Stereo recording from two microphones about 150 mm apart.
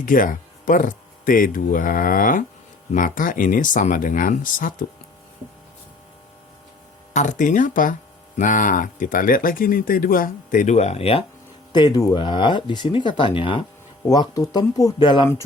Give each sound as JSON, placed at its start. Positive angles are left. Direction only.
{"t": 0.0, "sound": "speech", "side_deg": 65}
{"t": 7.1, "sound": "speech", "side_deg": 55}
{"t": 11.7, "sound": "speech", "side_deg": 25}